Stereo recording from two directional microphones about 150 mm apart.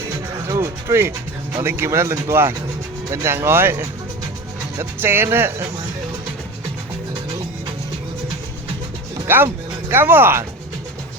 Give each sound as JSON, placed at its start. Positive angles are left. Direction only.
{"t": 0.4, "sound": "speech", "side_deg": -20}
{"t": 9.2, "sound": "speech", "side_deg": -15}